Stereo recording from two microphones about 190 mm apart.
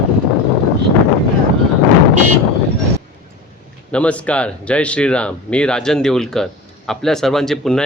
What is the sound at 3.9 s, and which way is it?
Speech, 5° left (ahead or behind).